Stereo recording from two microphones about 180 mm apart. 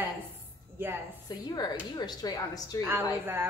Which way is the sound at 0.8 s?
10° right (ahead or behind).